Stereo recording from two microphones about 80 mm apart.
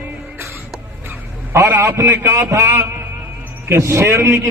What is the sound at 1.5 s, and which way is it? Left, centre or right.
A man's voice, right.